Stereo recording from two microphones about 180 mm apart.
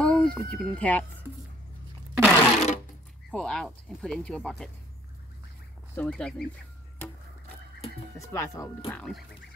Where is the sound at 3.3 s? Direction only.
5° left (ahead or behind).